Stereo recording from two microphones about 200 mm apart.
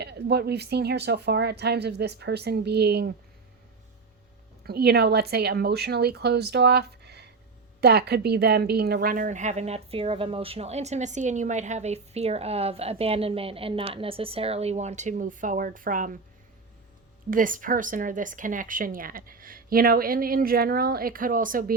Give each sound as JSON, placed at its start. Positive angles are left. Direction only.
{"t": 0.0, "sound": "speech", "side_deg": -55}
{"t": 4.6, "sound": "a woman's voice", "side_deg": -50}
{"t": 17.3, "sound": "a woman's voice", "side_deg": -40}